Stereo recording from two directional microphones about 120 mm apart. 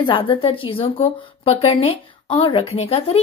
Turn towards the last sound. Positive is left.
turn(degrees=50)  # may be behind; listen again after turning